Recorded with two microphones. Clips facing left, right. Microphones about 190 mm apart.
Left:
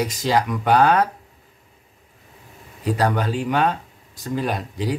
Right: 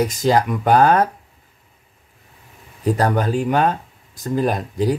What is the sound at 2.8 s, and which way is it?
Speech, 45° right (ahead or behind).